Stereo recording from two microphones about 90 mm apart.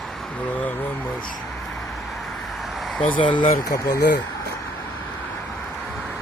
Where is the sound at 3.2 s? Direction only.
60° left (ahead or behind).